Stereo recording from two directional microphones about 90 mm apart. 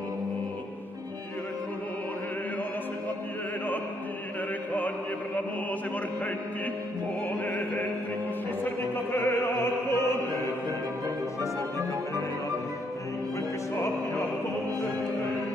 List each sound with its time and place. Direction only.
4.7 s music: 20° left (ahead or behind)
8.9 s music: 25° left (ahead or behind)